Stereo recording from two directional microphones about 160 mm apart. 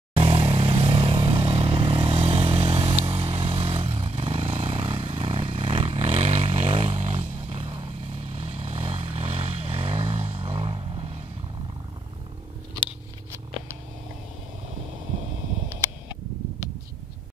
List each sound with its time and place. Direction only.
0.1 s vehicle: 35° right (ahead or behind)